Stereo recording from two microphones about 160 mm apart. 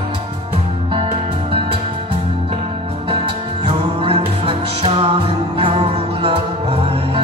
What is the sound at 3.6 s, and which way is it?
Music, 35° right (ahead or behind).